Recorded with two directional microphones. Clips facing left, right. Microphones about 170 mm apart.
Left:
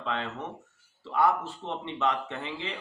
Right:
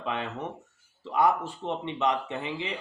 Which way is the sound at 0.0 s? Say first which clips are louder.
Right 1 dB; 15° right (ahead or behind).